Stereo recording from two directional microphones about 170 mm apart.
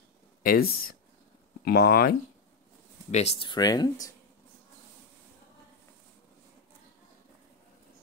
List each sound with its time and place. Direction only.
0.4 s speech: 60° left (ahead or behind)
3.1 s speech: 40° left (ahead or behind); by 4.1 s 25° left (ahead or behind)